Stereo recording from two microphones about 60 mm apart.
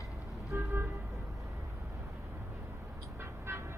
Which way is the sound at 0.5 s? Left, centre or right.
Right.